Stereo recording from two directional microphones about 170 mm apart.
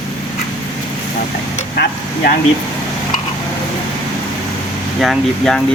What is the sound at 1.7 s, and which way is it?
Speech, 70° left (ahead or behind).